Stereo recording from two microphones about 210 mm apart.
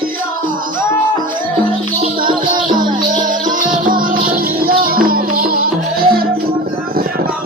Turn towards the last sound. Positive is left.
turn(degrees=-45)  # may be behind; listen again after turning